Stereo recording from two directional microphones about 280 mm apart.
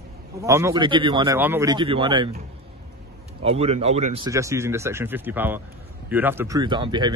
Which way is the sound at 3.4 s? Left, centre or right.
Right.